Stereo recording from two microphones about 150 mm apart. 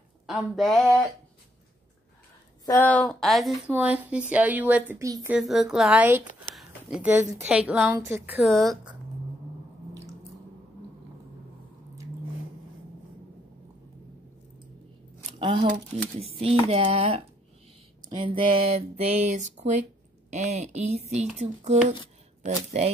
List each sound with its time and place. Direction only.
0.3 s a woman's voice: centre (ahead or behind)
2.8 s a woman's voice: 5° left (ahead or behind)
3.7 s speech: 10° right (ahead or behind)
5.0 s a woman's voice: 20° right (ahead or behind)
5.3 s a woman's voice: centre (ahead or behind)
6.5 s a sound: 5° right (ahead or behind)
7.4 s speech: 10° right (ahead or behind)
8.4 s a woman's voice: centre (ahead or behind)
15.3 s a sound: 35° right (ahead or behind)
16.2 s speech: 40° right (ahead or behind)